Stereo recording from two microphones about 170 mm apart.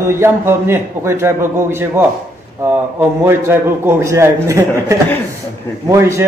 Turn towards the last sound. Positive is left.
turn(degrees=-15)  # may be behind; listen again after turning